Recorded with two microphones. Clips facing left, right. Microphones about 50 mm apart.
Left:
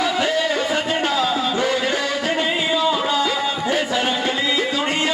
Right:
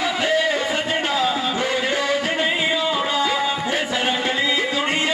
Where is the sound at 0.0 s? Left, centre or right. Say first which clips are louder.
Even; centre.